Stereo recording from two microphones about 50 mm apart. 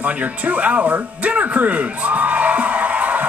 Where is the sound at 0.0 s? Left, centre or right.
Right.